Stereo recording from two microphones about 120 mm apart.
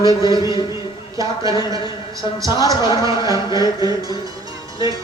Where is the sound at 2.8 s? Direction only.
35° left (ahead or behind).